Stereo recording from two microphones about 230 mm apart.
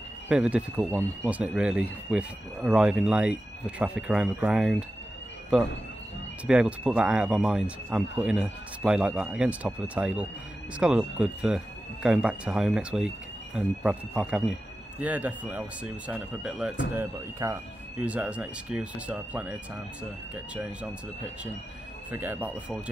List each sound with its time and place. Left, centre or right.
0.3 s speech: centre
6.4 s speech: centre
22.1 s speech: centre